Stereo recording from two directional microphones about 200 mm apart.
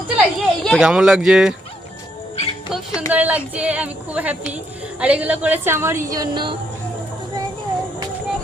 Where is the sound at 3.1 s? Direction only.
10° right (ahead or behind).